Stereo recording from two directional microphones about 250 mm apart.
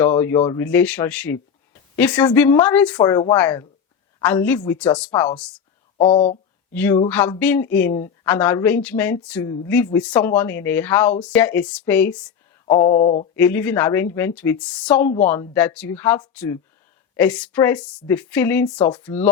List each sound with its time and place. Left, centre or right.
0.0 s speech: centre
6.0 s mantra: left
6.7 s speech: centre
12.7 s mantra: left
13.3 s speech: centre